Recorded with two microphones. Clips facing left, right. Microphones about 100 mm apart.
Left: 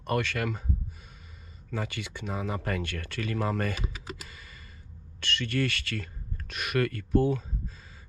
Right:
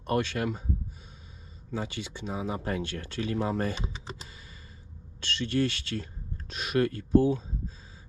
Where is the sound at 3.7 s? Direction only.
30° right (ahead or behind).